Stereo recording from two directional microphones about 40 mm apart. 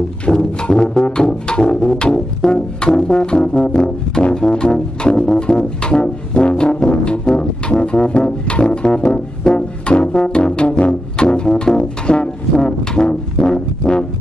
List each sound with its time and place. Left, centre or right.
0.2 s music: left
9.4 s brass instrument: left
10.8 s music: left
13.5 s brass instrument: left